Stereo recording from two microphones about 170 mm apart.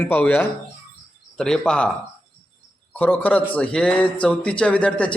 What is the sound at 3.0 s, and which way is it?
A man's voice, 10° left (ahead or behind).